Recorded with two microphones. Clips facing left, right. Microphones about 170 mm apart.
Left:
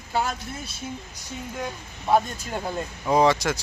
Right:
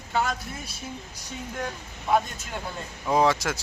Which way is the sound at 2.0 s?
30° left (ahead or behind).